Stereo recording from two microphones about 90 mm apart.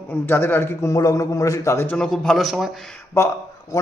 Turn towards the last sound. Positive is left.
turn(degrees=30)  # may be behind; listen again after turning